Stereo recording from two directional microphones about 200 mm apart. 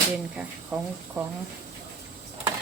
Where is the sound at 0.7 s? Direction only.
5° right (ahead or behind).